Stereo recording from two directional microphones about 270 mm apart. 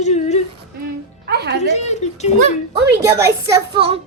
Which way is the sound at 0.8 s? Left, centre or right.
Right.